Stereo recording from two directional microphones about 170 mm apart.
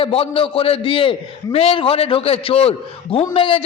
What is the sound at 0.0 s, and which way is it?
A man's voice, 35° left (ahead or behind).